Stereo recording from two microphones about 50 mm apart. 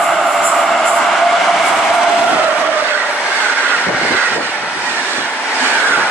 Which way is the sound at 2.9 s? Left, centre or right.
Right.